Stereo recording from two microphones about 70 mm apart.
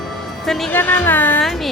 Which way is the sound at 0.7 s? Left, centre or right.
Left.